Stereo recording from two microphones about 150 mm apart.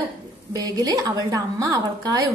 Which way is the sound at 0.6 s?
25° right (ahead or behind).